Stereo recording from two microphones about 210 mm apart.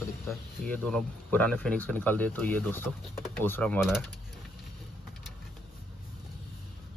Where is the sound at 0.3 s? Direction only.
5° left (ahead or behind).